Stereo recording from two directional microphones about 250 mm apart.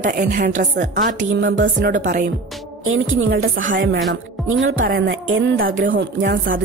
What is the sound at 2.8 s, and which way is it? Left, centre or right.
Speech, right.